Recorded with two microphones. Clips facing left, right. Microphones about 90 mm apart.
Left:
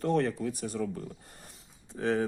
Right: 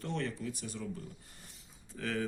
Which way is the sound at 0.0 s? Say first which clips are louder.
Left 9 dB; 45° left (ahead or behind).